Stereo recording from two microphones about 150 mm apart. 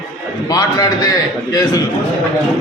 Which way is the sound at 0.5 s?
25° left (ahead or behind).